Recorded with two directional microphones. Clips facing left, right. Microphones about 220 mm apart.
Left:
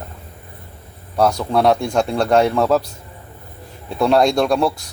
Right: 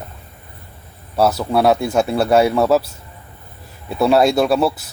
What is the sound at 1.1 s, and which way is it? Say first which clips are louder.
A man's voice: right 1 dB; 5° right (ahead or behind).